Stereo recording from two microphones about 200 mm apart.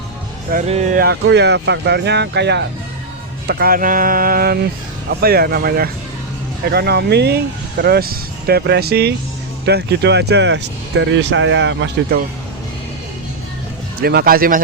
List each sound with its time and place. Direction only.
0.7 s speech: 35° right (ahead or behind); by 12.2 s 65° right (ahead or behind)
14.0 s speech: 50° right (ahead or behind)